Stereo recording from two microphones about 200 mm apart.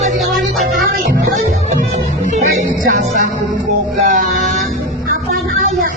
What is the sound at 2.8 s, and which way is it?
Music, 45° right (ahead or behind).